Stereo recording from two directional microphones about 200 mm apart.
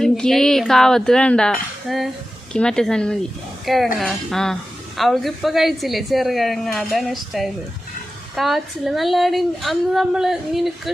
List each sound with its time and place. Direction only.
0.0 s a woman's voice: centre (ahead or behind)